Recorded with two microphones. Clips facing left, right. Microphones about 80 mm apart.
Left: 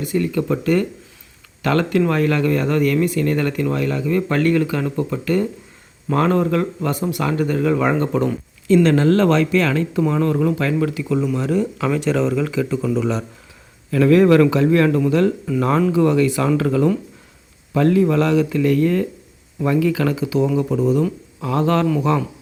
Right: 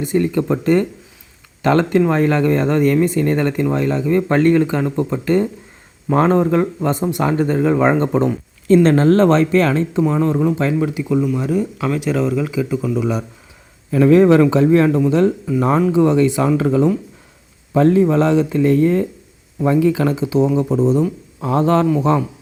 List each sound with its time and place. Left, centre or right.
0.0 s speech: right
10.0 s speech: right
11.2 s speech: centre
13.9 s speech: right
14.8 s speech: centre; by 21.8 s right